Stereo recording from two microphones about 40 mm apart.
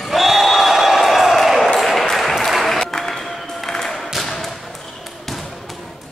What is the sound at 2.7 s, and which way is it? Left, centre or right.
Music, centre.